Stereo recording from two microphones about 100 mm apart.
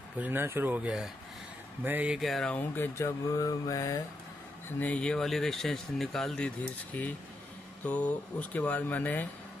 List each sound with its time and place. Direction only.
0.2 s speech: 20° right (ahead or behind)
0.8 s speech: 5° right (ahead or behind)
1.9 s speech: 15° right (ahead or behind)
2.1 s speech: centre (ahead or behind)
2.5 s speech: 20° left (ahead or behind)
3.3 s mantra: 35° left (ahead or behind)
4.7 s speech: 15° left (ahead or behind)